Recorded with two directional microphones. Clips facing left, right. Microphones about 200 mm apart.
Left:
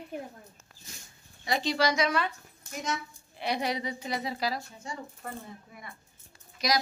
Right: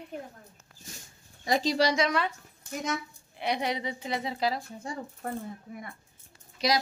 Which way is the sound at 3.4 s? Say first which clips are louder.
Right 1 dB; 20° right (ahead or behind).